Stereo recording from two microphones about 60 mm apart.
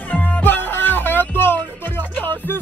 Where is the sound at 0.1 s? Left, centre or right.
Left.